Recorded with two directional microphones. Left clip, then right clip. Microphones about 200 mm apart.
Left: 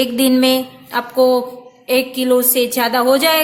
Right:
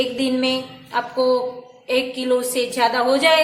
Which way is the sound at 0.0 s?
40° left (ahead or behind).